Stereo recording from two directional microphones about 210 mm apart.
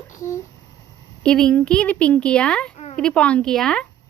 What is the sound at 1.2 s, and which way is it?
Speech, 5° left (ahead or behind).